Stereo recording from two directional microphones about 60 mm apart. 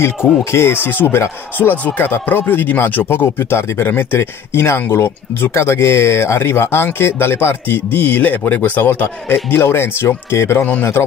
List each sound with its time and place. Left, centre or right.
0.0 s speech: left
10.6 s speech: left